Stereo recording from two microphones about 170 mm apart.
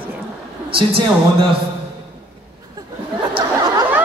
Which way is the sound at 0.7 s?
30° right (ahead or behind).